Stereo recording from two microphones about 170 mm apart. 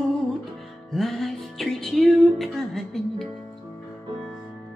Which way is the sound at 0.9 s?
Centre (ahead or behind).